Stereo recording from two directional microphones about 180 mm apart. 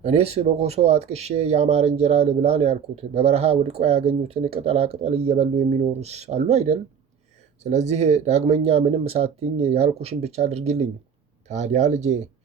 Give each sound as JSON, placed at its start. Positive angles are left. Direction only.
{"t": 0.0, "sound": "speech", "side_deg": -35}